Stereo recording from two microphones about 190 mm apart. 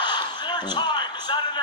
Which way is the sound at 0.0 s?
25° left (ahead or behind).